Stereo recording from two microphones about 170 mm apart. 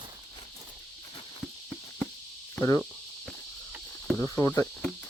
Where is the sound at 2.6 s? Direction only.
15° left (ahead or behind).